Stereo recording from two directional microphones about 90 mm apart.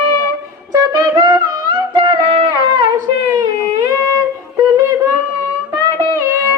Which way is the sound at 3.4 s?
50° right (ahead or behind).